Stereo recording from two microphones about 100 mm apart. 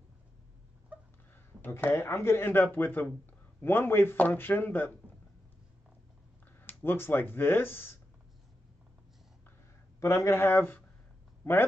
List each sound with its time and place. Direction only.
0.9 s a sound: 15° right (ahead or behind)
1.6 s speech: 20° left (ahead or behind)
6.6 s speech: 20° left (ahead or behind)
9.9 s speech: 30° left (ahead or behind)